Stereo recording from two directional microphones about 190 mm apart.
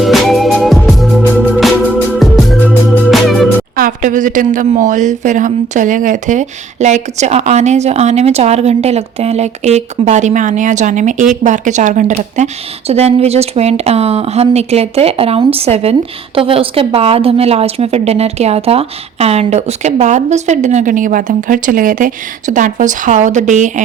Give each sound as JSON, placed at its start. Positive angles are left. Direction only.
{"t": 0.0, "sound": "music", "side_deg": 0}
{"t": 3.8, "sound": "speech", "side_deg": -45}